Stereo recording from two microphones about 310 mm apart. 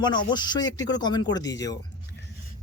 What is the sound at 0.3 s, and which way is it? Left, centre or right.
Speech, centre.